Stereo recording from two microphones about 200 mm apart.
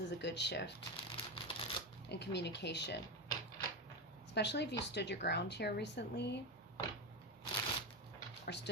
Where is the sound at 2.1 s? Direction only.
60° left (ahead or behind).